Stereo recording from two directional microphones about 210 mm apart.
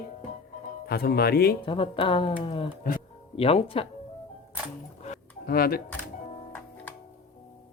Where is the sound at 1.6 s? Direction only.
25° left (ahead or behind).